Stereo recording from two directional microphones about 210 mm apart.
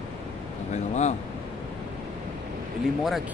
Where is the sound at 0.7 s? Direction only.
35° left (ahead or behind).